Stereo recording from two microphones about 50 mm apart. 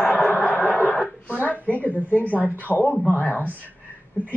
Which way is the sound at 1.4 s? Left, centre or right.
Left.